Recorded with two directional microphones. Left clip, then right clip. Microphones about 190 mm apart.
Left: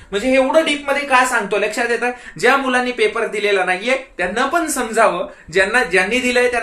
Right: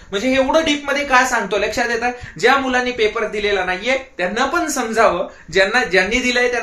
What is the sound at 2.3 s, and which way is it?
Speech, 15° left (ahead or behind).